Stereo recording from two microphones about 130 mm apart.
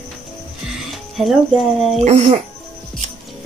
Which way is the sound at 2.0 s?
60° right (ahead or behind).